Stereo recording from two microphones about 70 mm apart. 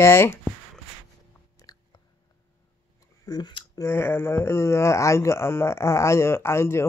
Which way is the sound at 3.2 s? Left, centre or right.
Left.